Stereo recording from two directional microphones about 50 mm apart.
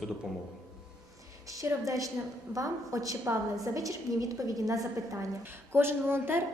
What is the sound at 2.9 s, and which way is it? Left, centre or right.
A woman's voice, right.